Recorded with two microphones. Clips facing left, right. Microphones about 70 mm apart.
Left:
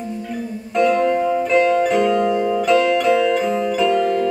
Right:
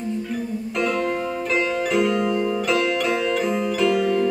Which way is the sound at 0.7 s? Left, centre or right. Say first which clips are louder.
Left 8 dB; centre.